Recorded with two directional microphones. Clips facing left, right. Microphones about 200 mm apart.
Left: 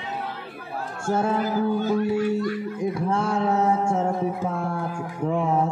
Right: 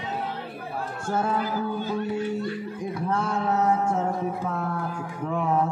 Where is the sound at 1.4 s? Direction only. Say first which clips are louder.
Left 5 dB; 45° left (ahead or behind).